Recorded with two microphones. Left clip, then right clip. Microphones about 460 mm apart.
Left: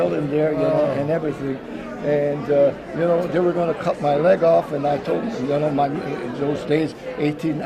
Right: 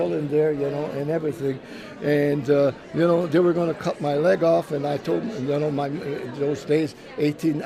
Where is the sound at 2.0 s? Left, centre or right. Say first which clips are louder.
Left 1 dB; right.